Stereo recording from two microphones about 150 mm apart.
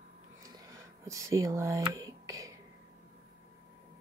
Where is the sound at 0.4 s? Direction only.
20° right (ahead or behind).